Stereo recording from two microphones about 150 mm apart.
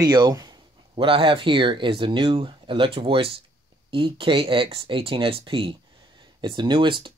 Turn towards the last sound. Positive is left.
turn(degrees=-30)  # may be behind; listen again after turning